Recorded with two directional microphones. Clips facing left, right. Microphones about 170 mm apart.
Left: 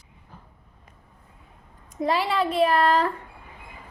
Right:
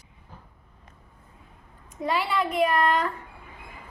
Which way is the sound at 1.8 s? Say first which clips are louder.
Left 3 dB; 35° left (ahead or behind).